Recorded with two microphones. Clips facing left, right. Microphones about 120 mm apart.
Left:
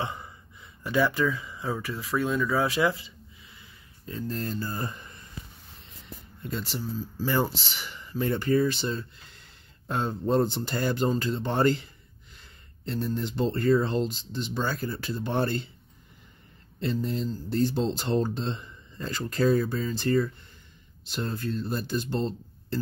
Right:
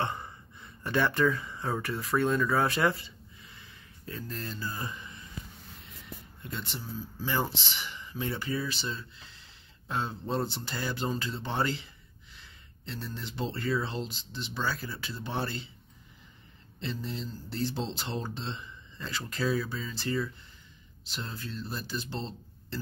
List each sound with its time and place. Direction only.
0.8 s speech: 5° left (ahead or behind)
4.3 s speech: 45° left (ahead or behind)
6.7 s speech: 40° left (ahead or behind)
16.8 s speech: 50° left (ahead or behind)